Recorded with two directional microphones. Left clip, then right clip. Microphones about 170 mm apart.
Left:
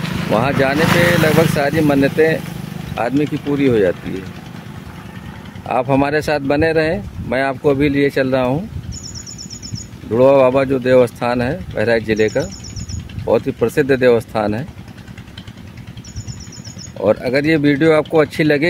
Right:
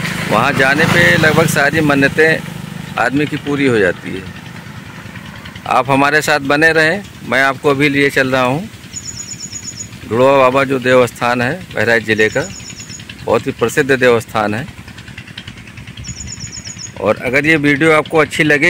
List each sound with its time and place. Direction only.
0.0 s vehicle: 35° right (ahead or behind)
0.4 s speech: 5° left (ahead or behind)
5.7 s speech: 5° left (ahead or behind)
10.1 s speech: centre (ahead or behind)
17.0 s speech: centre (ahead or behind)